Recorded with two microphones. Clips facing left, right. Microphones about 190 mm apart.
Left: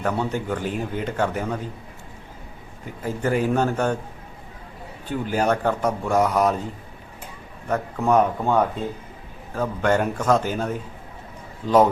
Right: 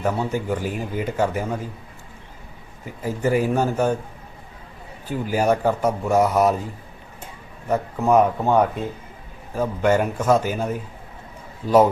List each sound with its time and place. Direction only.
0.0 s speech: 5° right (ahead or behind)
3.0 s speech: 10° right (ahead or behind)
5.0 s speech: 5° right (ahead or behind)
7.7 s speech: 5° right (ahead or behind)
9.6 s speech: 10° right (ahead or behind)